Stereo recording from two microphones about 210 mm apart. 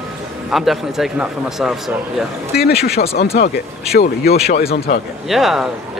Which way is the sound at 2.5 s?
50° left (ahead or behind).